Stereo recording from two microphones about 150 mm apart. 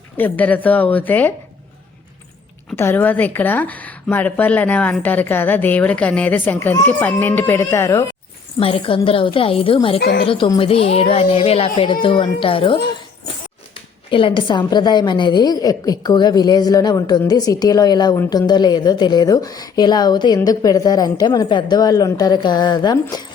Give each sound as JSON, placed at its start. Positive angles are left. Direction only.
{"t": 0.2, "sound": "a woman's voice", "side_deg": 10}
{"t": 2.7, "sound": "a woman's voice", "side_deg": 15}
{"t": 8.5, "sound": "a woman's voice", "side_deg": 40}
{"t": 14.1, "sound": "a woman's voice", "side_deg": 35}